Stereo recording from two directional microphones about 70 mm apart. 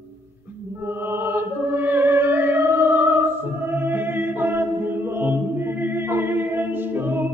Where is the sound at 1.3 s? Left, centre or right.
Right.